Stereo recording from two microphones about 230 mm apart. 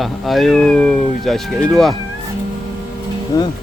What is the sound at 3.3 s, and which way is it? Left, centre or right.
Cattle, centre.